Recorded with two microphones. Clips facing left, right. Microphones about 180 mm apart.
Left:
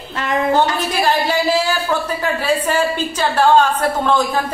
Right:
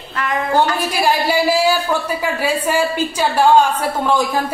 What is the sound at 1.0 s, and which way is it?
Speech, 10° right (ahead or behind).